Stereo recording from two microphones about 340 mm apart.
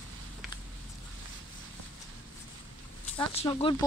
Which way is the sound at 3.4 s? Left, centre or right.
Centre.